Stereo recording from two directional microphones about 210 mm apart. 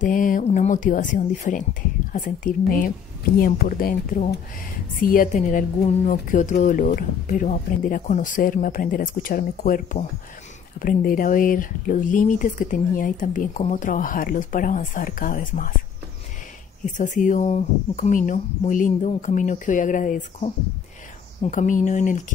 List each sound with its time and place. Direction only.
0.0 s a woman's voice: 40° left (ahead or behind)
16.9 s a woman's voice: 35° left (ahead or behind)